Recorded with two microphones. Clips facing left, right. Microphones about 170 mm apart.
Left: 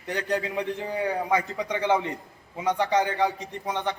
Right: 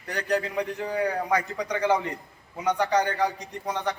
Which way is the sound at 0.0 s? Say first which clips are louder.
Right 1 dB; 25° left (ahead or behind).